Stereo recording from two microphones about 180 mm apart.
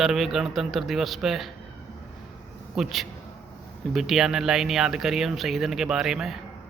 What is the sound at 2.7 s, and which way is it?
Speech, centre (ahead or behind).